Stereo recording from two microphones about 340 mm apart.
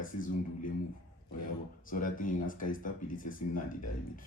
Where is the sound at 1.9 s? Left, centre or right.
Left.